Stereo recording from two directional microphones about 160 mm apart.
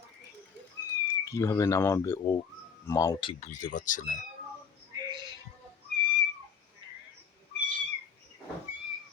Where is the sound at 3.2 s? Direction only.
45° left (ahead or behind).